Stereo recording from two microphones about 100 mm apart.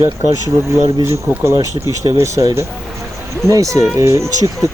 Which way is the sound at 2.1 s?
30° right (ahead or behind).